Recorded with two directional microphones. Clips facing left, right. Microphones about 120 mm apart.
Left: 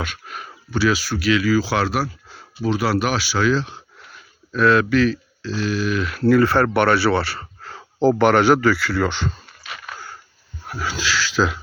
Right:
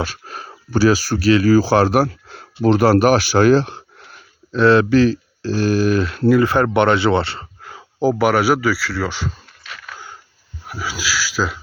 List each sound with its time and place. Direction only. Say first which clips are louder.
0.0 s speech: right 4 dB; 35° right (ahead or behind); by 3.8 s 55° right (ahead or behind)
4.5 s speech: right 4 dB; 30° right (ahead or behind)
5.5 s speech: right 6 dB; 45° right (ahead or behind)
6.2 s speech: even; 15° right (ahead or behind)
7.6 s speech: left 1 dB; 10° right (ahead or behind)